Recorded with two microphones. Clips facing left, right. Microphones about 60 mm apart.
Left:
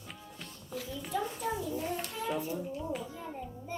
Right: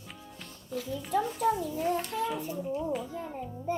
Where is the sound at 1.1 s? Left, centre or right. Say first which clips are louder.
Right 7 dB; right.